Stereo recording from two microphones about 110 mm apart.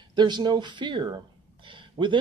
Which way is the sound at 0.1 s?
40° right (ahead or behind).